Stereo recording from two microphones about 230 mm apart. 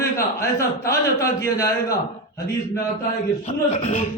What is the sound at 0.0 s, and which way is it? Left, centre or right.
A man's voice, centre.